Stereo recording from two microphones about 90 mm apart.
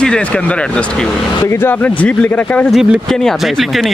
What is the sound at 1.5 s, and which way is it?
Speech, 25° left (ahead or behind).